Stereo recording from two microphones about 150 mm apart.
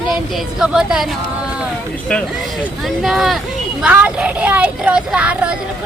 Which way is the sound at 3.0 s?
Centre (ahead or behind).